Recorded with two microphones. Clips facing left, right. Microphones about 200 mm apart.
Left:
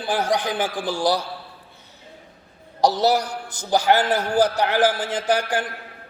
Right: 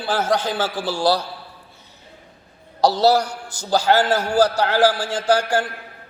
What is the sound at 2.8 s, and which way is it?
A man's voice, 15° left (ahead or behind).